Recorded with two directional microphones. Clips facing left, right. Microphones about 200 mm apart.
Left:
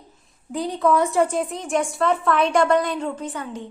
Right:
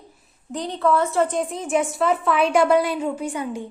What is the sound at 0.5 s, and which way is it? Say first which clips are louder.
A woman's voice: left 1 dB; 10° left (ahead or behind).